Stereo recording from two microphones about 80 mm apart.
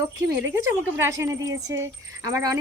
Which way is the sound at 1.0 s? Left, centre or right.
Right.